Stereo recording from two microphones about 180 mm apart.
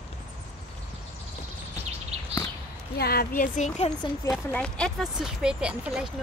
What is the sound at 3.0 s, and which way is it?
Speech, 60° left (ahead or behind).